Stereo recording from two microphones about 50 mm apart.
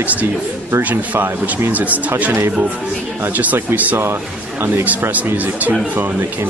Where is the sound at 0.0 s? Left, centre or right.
Right.